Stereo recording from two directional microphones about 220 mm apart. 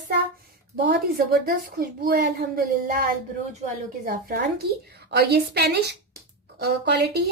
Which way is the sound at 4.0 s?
40° right (ahead or behind).